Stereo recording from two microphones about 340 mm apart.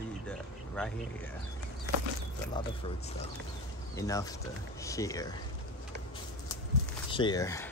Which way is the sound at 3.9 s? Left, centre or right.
Centre.